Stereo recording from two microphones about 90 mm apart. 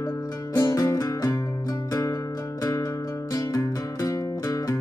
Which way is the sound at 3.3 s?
40° left (ahead or behind).